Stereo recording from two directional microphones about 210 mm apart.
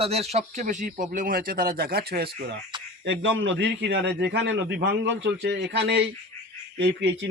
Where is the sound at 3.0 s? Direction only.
60° right (ahead or behind).